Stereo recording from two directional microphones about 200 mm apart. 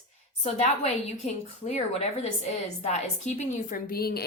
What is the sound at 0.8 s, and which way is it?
A woman's voice, 30° left (ahead or behind).